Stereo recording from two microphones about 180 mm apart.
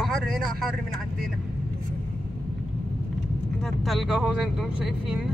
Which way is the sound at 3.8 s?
Centre (ahead or behind).